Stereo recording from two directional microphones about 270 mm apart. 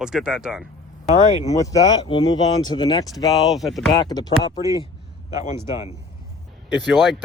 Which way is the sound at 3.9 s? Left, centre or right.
Centre.